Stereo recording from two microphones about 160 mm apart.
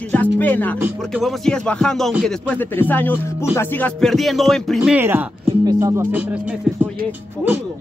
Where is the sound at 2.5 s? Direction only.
10° left (ahead or behind); by 6.5 s 10° right (ahead or behind).